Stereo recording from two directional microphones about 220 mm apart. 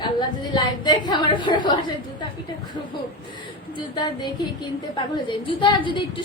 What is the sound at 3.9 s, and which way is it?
A woman's voice, 20° left (ahead or behind).